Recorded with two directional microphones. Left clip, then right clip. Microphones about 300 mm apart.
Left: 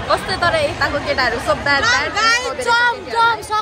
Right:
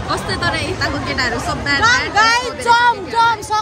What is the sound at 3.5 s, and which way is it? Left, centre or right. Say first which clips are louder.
Speech: right 1 dB; centre.